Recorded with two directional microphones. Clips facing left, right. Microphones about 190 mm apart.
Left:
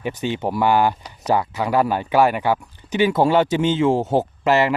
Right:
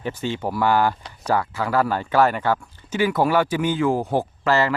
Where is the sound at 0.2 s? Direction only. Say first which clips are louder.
Left 3 dB; 20° left (ahead or behind).